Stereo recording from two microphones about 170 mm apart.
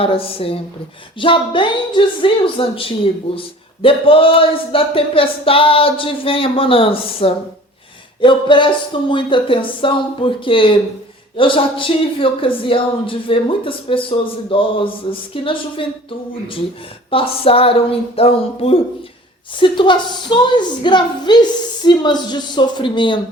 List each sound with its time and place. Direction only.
0.0 s speech: 35° left (ahead or behind)
17.1 s speech: 35° left (ahead or behind)